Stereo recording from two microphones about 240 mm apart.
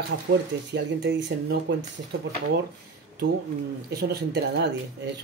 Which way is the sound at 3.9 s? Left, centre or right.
Right.